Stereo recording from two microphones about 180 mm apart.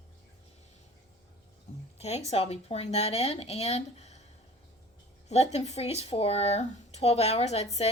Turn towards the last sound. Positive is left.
turn(degrees=35)  # may be behind; listen again after turning